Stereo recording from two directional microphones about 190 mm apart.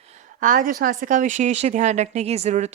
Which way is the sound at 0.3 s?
45° right (ahead or behind).